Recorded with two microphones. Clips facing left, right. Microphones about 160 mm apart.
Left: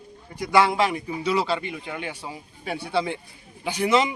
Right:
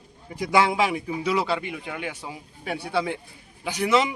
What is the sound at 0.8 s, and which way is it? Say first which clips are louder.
Speech: even; 5° right (ahead or behind).